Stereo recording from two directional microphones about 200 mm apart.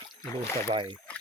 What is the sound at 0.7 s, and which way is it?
Speech, 25° right (ahead or behind).